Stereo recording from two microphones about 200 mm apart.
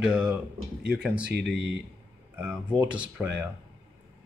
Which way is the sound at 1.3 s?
55° right (ahead or behind).